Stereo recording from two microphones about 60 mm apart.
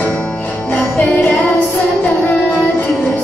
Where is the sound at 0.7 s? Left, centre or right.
Left.